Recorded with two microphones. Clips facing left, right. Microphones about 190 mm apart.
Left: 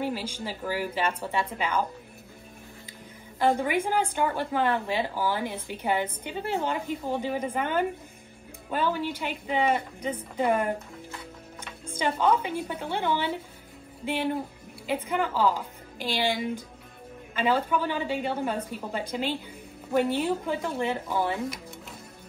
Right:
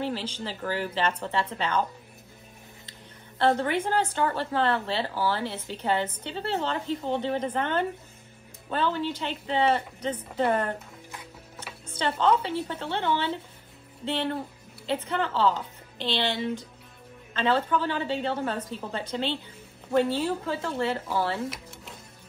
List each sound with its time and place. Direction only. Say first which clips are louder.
0.0 s speech: even; 10° left (ahead or behind)
2.9 s speech: left 3 dB; 10° left (ahead or behind)
11.9 s speech: even; 10° left (ahead or behind)